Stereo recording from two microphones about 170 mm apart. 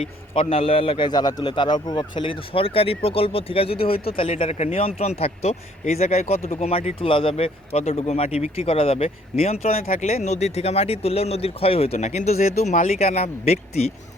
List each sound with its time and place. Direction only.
0.0 s a man's voice: 35° left (ahead or behind)